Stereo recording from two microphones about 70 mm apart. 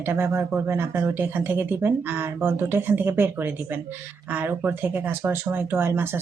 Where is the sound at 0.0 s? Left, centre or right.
Right.